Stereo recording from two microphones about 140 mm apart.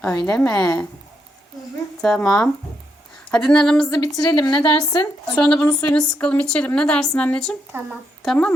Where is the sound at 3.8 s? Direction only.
25° left (ahead or behind).